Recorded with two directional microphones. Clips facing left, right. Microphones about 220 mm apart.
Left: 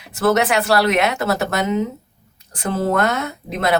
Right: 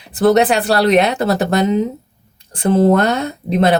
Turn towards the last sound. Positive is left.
turn(degrees=-30)  # may be behind; listen again after turning